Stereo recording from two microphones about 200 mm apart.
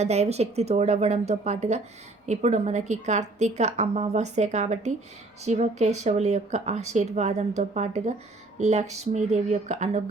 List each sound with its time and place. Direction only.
0.0 s a woman's voice: 35° right (ahead or behind)